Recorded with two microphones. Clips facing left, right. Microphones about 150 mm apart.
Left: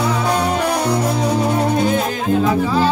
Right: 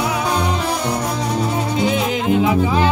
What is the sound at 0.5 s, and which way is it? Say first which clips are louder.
Music: left 3 dB; 55° left (ahead or behind).